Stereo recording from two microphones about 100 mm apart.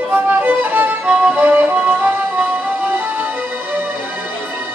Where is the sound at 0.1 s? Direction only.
15° right (ahead or behind).